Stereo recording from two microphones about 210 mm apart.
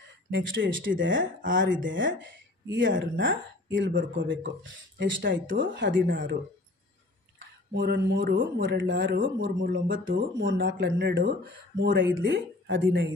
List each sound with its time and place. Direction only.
0.3 s speech: 65° right (ahead or behind)
5.5 s speech: 40° right (ahead or behind)
7.3 s speech: 60° right (ahead or behind)